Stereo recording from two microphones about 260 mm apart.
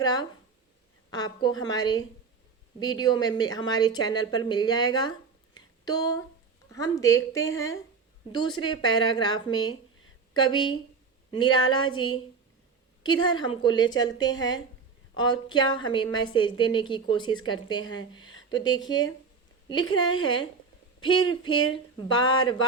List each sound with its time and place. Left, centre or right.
0.0 s a woman's voice: centre
5.5 s a sound: centre
6.7 s a woman's voice: centre